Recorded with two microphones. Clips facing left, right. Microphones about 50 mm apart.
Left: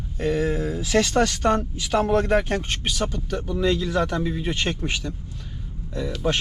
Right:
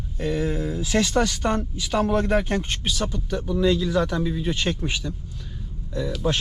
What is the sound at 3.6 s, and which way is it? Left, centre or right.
Speech, left.